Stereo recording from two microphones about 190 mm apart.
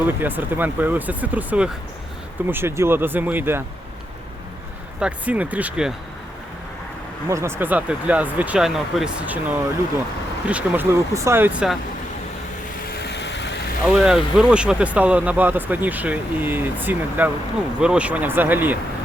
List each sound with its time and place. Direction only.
0.1 s speech: 10° right (ahead or behind)
4.9 s speech: 5° right (ahead or behind)
7.3 s speech: 15° right (ahead or behind)
10.4 s speech: 5° right (ahead or behind)
12.9 s vehicle: 60° left (ahead or behind)
13.8 s speech: 5° right (ahead or behind)